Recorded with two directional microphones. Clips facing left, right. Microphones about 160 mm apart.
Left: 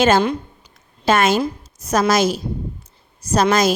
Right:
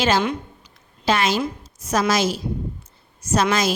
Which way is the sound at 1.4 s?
40° left (ahead or behind).